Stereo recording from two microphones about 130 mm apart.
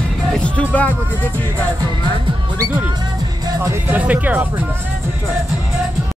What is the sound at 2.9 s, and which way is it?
Speech, 30° right (ahead or behind).